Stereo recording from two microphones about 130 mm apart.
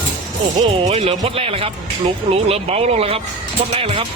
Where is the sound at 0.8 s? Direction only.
50° right (ahead or behind).